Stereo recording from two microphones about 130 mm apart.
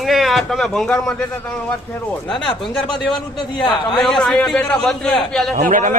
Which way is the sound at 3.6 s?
35° left (ahead or behind).